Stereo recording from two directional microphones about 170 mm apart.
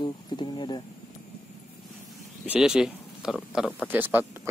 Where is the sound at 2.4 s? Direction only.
5° right (ahead or behind).